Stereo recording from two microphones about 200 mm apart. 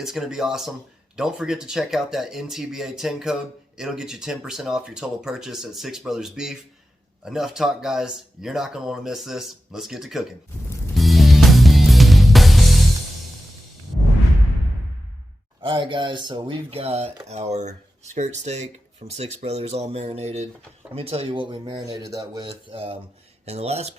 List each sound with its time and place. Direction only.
0.0 s speech: centre (ahead or behind)
10.9 s music: centre (ahead or behind)
15.6 s speech: 25° right (ahead or behind)